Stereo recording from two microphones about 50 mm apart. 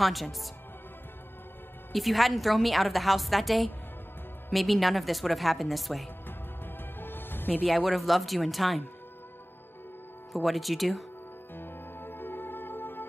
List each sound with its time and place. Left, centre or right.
0.0 s a woman's voice: centre
1.9 s a woman's voice: centre
7.0 s music: left
7.6 s a woman's voice: centre
10.3 s a woman's voice: centre
11.5 s music: left